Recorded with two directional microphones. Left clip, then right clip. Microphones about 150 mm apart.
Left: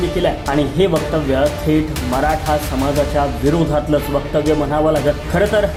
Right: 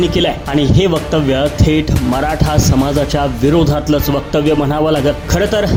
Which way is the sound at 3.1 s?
35° right (ahead or behind).